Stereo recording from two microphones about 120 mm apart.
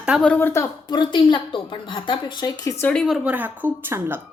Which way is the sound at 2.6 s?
30° left (ahead or behind).